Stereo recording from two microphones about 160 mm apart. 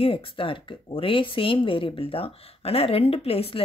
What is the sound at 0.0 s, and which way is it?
Speech, 35° left (ahead or behind).